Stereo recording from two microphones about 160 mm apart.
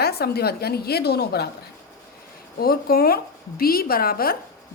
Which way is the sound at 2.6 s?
70° left (ahead or behind).